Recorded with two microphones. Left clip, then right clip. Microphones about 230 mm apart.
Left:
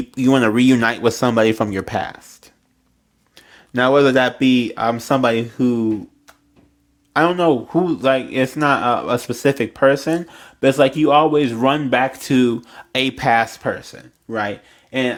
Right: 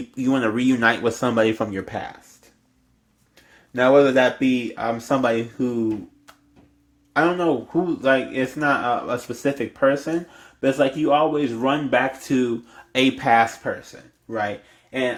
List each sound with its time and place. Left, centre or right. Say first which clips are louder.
0.1 s speech: left 6 dB; left
3.7 s speech: left 2 dB; left
7.1 s speech: left 4 dB; left